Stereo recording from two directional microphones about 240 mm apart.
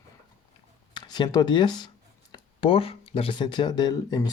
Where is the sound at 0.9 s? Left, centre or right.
Centre.